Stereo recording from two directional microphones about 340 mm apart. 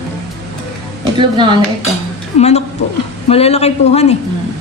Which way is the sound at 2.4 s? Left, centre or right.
Centre.